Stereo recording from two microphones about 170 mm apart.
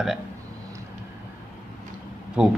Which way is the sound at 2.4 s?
5° right (ahead or behind).